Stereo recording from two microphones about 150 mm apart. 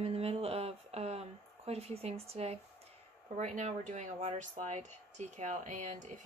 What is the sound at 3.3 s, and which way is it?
Speech, 55° right (ahead or behind).